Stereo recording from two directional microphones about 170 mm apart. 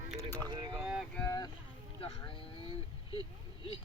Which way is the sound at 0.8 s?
5° right (ahead or behind).